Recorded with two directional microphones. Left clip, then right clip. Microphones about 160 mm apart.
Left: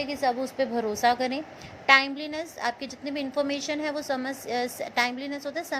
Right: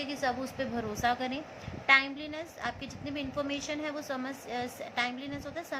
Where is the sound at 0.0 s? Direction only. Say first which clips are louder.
Left 6 dB; 30° left (ahead or behind).